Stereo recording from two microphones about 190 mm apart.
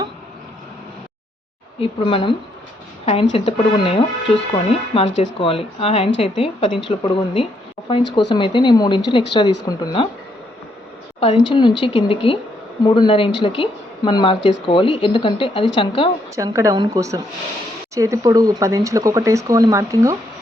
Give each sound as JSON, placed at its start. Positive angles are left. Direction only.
{"t": 1.8, "sound": "speech", "side_deg": 30}
{"t": 3.3, "sound": "speech", "side_deg": 30}
{"t": 11.2, "sound": "speech", "side_deg": 30}
{"t": 16.3, "sound": "speech", "side_deg": -15}